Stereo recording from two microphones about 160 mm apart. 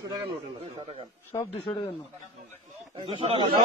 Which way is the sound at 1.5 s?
35° left (ahead or behind).